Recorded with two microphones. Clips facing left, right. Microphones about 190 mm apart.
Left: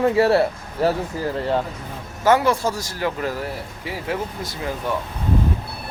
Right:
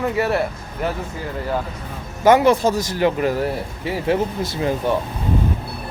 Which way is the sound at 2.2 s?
20° right (ahead or behind).